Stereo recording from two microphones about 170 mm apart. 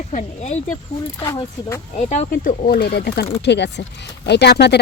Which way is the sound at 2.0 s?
45° left (ahead or behind).